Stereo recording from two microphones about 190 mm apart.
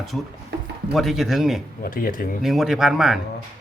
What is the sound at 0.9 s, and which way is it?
Speech, centre (ahead or behind).